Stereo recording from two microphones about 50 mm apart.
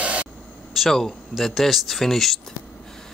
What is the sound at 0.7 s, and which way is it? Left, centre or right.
Speech, centre.